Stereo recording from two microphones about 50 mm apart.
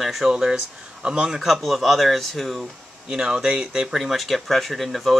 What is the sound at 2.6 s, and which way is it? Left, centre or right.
Speech, centre.